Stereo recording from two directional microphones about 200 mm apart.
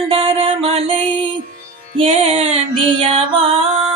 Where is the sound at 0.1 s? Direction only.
30° right (ahead or behind).